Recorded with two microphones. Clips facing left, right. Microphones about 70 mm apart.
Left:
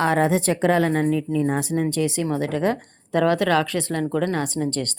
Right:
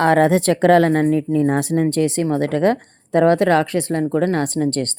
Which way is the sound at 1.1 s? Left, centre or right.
Right.